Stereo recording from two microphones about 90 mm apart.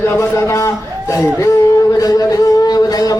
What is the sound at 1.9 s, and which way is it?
Speech, 40° left (ahead or behind).